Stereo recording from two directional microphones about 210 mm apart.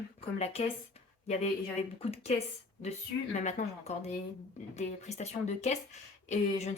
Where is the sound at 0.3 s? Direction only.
30° left (ahead or behind).